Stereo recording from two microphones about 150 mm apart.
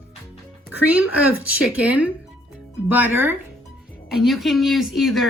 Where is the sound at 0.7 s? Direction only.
10° right (ahead or behind).